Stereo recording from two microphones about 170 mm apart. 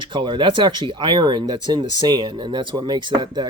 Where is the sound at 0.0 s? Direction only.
30° right (ahead or behind).